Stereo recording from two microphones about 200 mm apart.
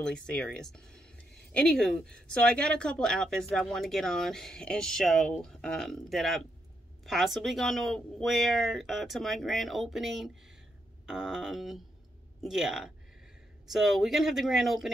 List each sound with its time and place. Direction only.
0.0 s speech: 5° left (ahead or behind)